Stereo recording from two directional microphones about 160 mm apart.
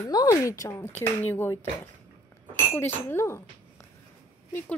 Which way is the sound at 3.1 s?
15° left (ahead or behind).